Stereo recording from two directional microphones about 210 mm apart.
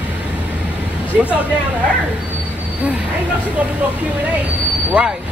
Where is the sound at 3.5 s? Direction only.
5° right (ahead or behind).